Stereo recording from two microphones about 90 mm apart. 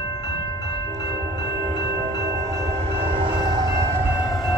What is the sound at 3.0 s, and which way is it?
Train, 75° right (ahead or behind).